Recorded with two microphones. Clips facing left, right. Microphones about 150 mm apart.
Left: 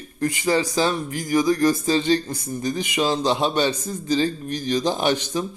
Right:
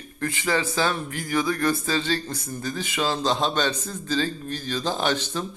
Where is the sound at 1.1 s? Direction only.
35° left (ahead or behind).